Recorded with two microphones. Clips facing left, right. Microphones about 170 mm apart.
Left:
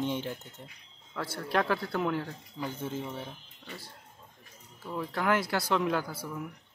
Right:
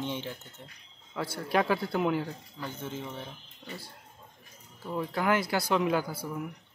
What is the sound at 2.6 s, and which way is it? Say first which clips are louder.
Speech: left 3 dB; 10° left (ahead or behind).